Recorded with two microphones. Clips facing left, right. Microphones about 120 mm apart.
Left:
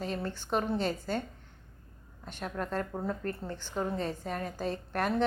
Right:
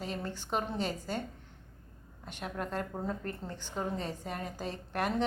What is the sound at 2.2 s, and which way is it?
A woman's voice, 15° right (ahead or behind).